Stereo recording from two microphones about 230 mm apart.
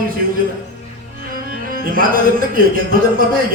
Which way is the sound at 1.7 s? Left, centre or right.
Right.